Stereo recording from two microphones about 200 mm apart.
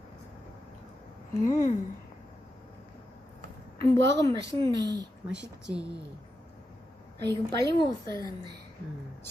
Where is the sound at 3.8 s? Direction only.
15° left (ahead or behind).